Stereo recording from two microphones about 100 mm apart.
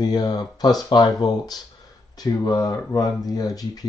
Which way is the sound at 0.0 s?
45° left (ahead or behind).